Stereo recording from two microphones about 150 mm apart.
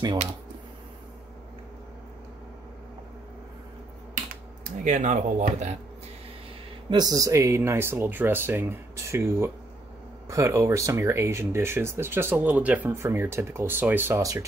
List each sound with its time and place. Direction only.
4.8 s speech: 55° right (ahead or behind)
6.9 s speech: 25° right (ahead or behind)